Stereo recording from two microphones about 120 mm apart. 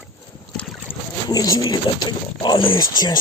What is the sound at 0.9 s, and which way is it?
Boat, 20° left (ahead or behind).